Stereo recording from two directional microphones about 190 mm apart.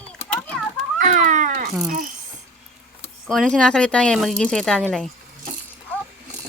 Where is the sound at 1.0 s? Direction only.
40° right (ahead or behind).